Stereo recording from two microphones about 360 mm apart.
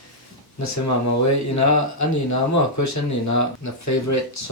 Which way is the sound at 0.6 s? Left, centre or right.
Left.